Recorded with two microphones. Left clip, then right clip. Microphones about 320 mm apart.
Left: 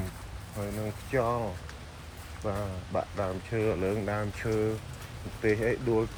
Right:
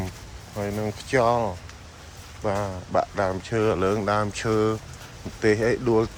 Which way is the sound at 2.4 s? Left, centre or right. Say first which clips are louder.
Right 8 dB; right.